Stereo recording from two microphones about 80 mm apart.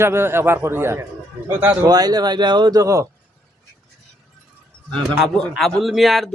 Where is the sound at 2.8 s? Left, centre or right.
Right.